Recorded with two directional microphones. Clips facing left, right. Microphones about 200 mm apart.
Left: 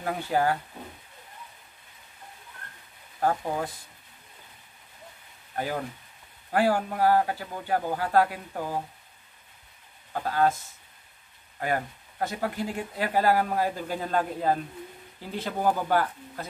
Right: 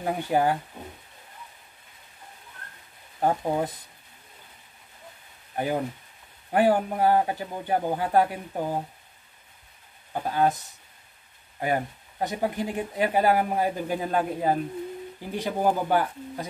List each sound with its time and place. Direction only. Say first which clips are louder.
0.0 s speech: right 2 dB; 15° right (ahead or behind)
3.2 s a man's voice: right 2 dB; 20° right (ahead or behind)
5.6 s a man's voice: right 4 dB; 20° right (ahead or behind)
10.1 s speech: right 1 dB; 15° right (ahead or behind)
11.6 s speech: right 2 dB; 15° right (ahead or behind)